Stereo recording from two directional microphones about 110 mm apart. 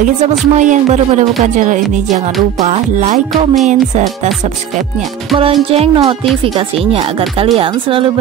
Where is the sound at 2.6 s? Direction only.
90° right.